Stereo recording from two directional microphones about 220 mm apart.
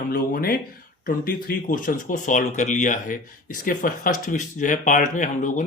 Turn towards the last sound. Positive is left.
turn(degrees=35)  # may be behind; listen again after turning